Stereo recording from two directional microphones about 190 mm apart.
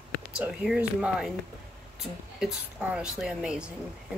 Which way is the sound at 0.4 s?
5° right (ahead or behind).